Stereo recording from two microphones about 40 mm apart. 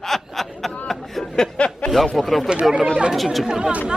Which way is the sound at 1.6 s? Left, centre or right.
Left.